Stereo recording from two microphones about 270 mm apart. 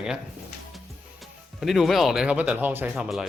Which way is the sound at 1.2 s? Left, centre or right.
Centre.